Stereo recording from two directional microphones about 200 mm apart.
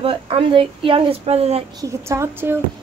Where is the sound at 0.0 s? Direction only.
25° right (ahead or behind).